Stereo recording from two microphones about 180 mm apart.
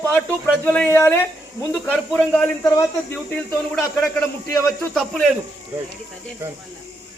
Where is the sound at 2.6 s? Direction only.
20° left (ahead or behind).